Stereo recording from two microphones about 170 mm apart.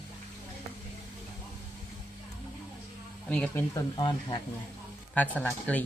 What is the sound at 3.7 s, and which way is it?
Speech, 30° left (ahead or behind).